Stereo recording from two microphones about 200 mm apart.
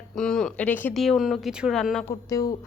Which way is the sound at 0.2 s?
5° left (ahead or behind).